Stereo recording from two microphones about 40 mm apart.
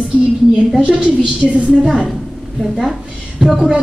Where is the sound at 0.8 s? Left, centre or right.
Right.